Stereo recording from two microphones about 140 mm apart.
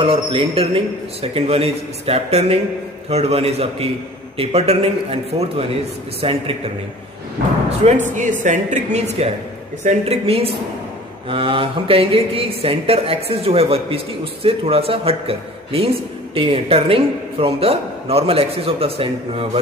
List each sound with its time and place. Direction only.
0.0 s a man's voice: 40° right (ahead or behind)
7.8 s speech: 60° right (ahead or behind); by 19.6 s 40° right (ahead or behind)